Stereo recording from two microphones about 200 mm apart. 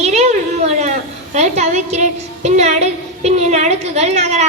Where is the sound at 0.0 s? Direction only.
35° right (ahead or behind).